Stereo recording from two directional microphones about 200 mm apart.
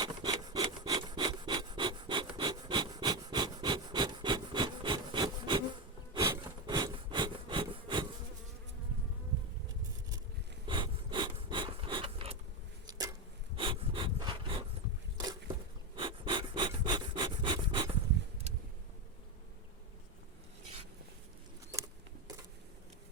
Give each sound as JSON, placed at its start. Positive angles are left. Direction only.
{"t": 0.0, "sound": "rub", "side_deg": -20}
{"t": 6.1, "sound": "wood", "side_deg": -20}
{"t": 10.7, "sound": "a sound", "side_deg": -25}
{"t": 13.6, "sound": "breathing", "side_deg": -25}
{"t": 16.0, "sound": "pant", "side_deg": -25}